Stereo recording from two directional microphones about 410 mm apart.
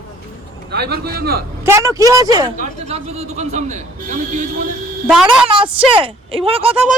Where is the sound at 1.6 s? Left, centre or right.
Centre.